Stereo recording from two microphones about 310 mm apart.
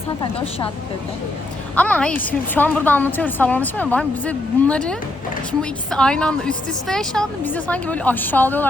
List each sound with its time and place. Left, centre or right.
0.2 s a woman's voice: centre
1.7 s a woman's voice: centre